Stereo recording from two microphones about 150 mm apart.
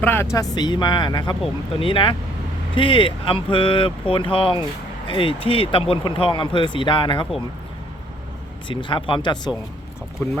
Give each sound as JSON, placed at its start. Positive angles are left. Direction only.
{"t": 0.0, "sound": "speech", "side_deg": 15}
{"t": 8.6, "sound": "speech", "side_deg": 35}